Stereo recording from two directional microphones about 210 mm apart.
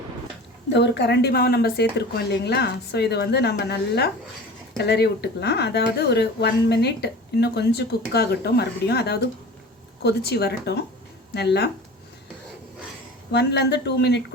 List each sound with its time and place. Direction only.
0.7 s speech: 55° left (ahead or behind)
13.3 s speech: 55° left (ahead or behind)